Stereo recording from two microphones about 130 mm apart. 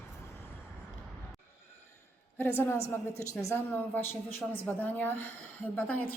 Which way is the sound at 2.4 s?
20° left (ahead or behind).